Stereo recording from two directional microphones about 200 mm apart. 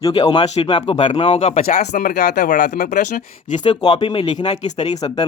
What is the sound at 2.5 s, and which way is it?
Speech, 40° left (ahead or behind).